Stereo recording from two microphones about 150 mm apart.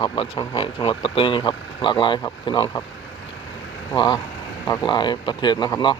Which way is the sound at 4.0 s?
30° left (ahead or behind).